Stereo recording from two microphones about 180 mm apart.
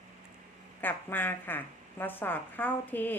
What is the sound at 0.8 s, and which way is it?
A woman's voice, 10° left (ahead or behind).